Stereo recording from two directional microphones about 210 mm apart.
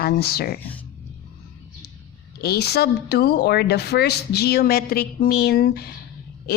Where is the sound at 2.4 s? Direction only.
50° left (ahead or behind).